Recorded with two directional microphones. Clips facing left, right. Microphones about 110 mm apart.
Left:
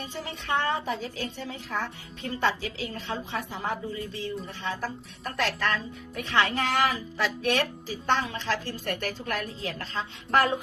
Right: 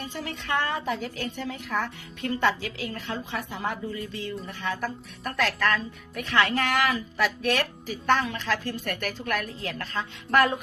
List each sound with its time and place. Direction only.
0.0 s speech: 25° left (ahead or behind)